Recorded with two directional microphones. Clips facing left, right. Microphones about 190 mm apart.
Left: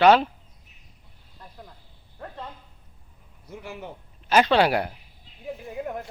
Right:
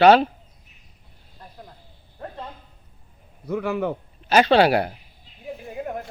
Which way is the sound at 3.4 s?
65° right (ahead or behind).